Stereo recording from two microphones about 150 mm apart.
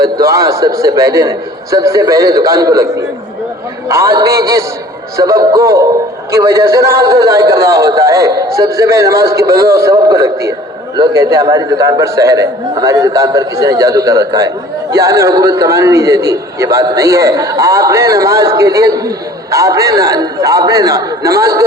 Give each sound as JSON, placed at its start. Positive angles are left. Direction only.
{"t": 0.0, "sound": "a man's voice", "side_deg": -20}
{"t": 3.8, "sound": "a man's voice", "side_deg": -20}